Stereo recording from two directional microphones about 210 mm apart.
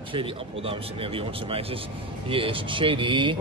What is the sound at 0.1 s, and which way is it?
Speech, 25° right (ahead or behind).